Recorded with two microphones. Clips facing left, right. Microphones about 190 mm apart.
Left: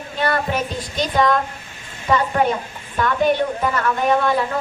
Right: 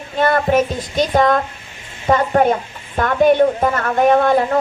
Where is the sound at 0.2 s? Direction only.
50° right (ahead or behind).